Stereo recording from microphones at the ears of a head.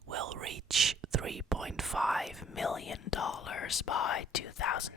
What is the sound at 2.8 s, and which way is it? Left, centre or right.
Speech, left.